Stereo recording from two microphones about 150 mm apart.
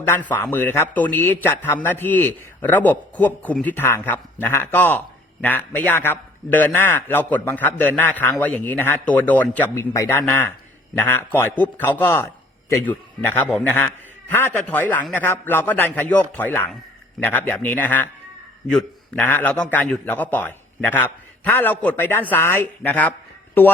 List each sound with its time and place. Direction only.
0.1 s a man's voice: 10° left (ahead or behind)